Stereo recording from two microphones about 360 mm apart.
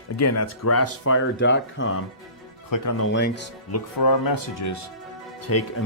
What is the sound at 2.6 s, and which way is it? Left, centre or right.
Speech, left.